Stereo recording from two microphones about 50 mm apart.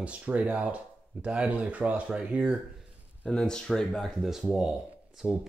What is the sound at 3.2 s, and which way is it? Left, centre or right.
Speech, centre.